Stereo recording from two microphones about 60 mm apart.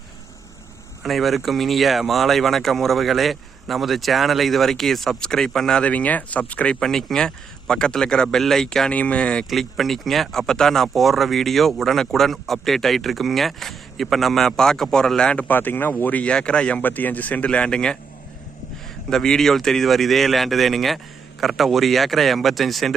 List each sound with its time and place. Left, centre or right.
1.0 s a man's voice: centre
5.8 s speech: left
6.7 s speech: centre
8.9 s speech: left
9.5 s a man's voice: centre
15.4 s speech: left
16.2 s speech: centre
16.8 s speech: left; by 17.9 s centre
19.1 s a man's voice: centre